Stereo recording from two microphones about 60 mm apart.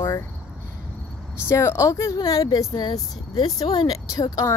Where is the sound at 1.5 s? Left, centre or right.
Left.